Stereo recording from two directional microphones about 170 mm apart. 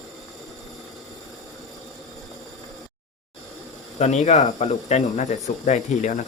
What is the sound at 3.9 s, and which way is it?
Speech, 45° left (ahead or behind).